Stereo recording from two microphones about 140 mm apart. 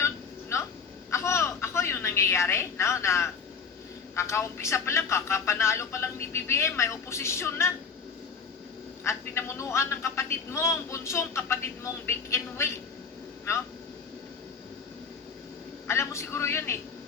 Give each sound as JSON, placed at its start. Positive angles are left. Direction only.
{"t": 0.5, "sound": "a sound", "side_deg": 20}
{"t": 4.1, "sound": "a man's voice", "side_deg": 20}
{"t": 9.0, "sound": "a man's voice", "side_deg": 20}
{"t": 15.9, "sound": "a man's voice", "side_deg": 20}